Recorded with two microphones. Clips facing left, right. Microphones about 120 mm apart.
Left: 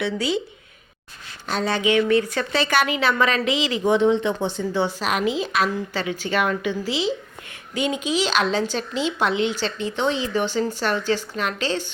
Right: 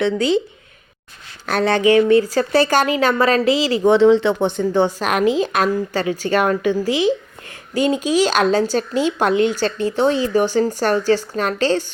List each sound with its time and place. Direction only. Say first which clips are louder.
1.5 s speech: right 6 dB; 65° right (ahead or behind)
1.8 s speech: right 6 dB; 40° right (ahead or behind)
3.8 s speech: right 6 dB; 90° right; by 11.9 s 40° right (ahead or behind)